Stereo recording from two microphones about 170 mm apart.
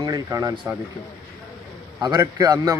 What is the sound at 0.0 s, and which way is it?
Speech, 20° right (ahead or behind).